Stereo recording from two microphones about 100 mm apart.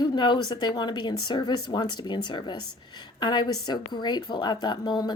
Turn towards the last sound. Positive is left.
turn(degrees=45)  # may be behind; listen again after turning